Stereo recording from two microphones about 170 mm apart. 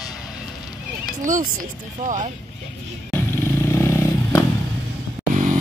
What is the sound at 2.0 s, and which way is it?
Speech, 45° right (ahead or behind).